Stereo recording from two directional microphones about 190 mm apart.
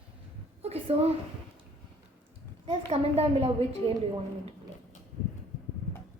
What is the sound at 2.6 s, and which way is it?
A woman's voice, 30° right (ahead or behind).